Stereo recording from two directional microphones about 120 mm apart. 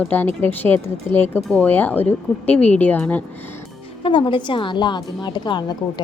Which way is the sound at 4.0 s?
45° left (ahead or behind).